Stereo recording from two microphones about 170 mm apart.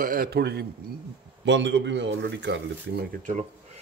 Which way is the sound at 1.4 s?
90° right.